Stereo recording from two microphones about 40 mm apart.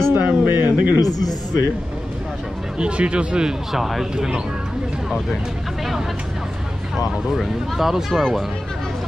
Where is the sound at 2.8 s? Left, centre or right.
Right.